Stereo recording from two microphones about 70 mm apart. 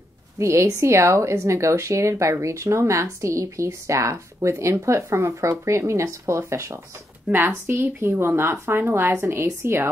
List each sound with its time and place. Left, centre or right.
0.4 s a woman's voice: right